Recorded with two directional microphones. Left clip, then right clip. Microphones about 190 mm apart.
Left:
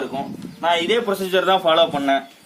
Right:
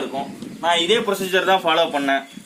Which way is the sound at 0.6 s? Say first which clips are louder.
Right 1 dB; centre (ahead or behind).